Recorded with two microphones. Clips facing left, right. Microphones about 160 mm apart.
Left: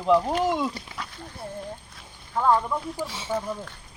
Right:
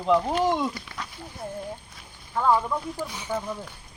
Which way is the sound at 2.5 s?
Centre (ahead or behind).